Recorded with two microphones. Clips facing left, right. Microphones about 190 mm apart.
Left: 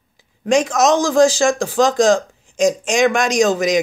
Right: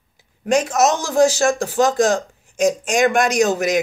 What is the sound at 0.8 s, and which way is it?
Speech, 90° left.